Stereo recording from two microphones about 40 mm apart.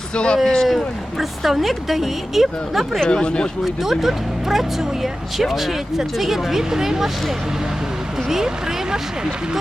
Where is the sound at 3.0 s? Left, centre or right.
Left.